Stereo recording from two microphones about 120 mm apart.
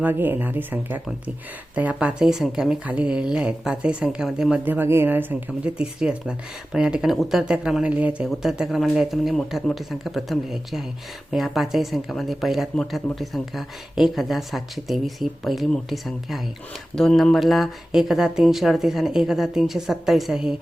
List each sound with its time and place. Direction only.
0.0 s speech: 15° right (ahead or behind)